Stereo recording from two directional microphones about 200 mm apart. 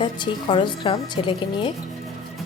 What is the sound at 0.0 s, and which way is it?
A woman's voice, 25° left (ahead or behind).